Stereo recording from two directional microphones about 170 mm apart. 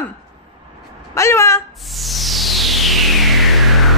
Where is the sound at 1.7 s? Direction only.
Centre (ahead or behind).